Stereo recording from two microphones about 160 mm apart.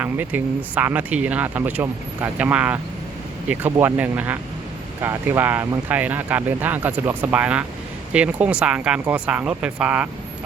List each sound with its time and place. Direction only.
0.0 s speech: 10° right (ahead or behind)